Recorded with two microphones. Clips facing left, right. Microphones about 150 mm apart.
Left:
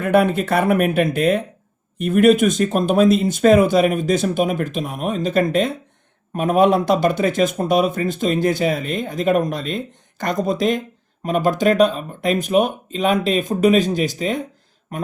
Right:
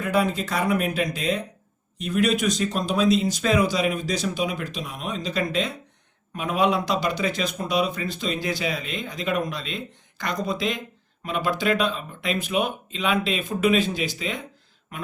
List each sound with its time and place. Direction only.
0.0 s speech: 55° left (ahead or behind)